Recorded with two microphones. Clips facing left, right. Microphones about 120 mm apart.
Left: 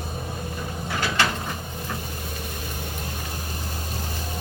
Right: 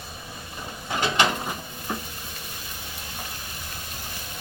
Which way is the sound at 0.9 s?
20° right (ahead or behind).